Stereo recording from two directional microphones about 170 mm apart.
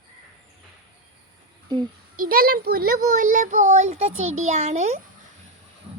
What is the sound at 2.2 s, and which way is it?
Speech, 60° right (ahead or behind).